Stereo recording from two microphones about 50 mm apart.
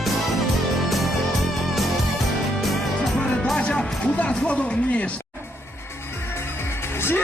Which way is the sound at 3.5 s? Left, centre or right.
Centre.